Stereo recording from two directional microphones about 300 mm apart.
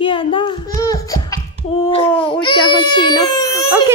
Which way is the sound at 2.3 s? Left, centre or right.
Centre.